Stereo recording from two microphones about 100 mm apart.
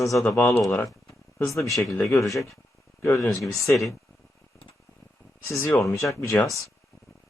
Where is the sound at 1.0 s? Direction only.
30° left (ahead or behind).